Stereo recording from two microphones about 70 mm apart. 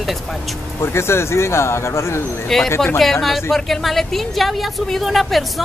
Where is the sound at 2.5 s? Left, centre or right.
Centre.